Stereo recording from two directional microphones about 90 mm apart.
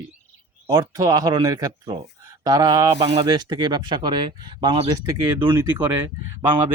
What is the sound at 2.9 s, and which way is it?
Speech, 75° right (ahead or behind).